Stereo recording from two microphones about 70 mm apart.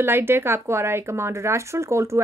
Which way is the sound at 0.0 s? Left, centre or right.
Right.